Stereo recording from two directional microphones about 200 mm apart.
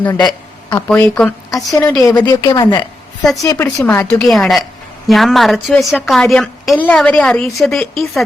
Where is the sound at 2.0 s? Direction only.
20° left (ahead or behind); by 8.2 s centre (ahead or behind).